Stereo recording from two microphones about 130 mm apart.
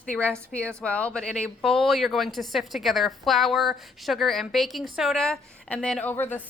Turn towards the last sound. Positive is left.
turn(degrees=15)  # may be behind; listen again after turning